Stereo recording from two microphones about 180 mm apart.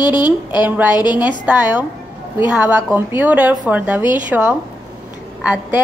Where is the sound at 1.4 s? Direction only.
10° right (ahead or behind).